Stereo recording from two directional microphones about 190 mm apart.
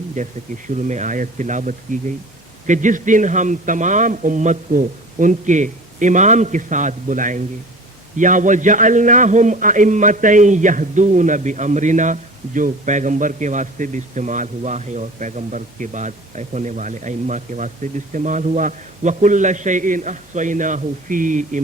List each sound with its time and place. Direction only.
0.2 s a man's voice: 40° right (ahead or behind)